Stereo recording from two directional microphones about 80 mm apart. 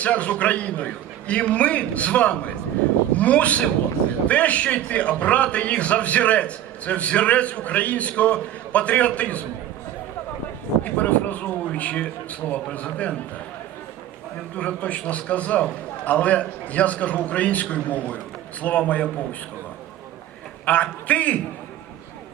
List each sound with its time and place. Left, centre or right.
0.0 s a man's voice: centre
10.8 s a man's voice: centre
14.5 s a man's voice: centre
20.7 s a man's voice: centre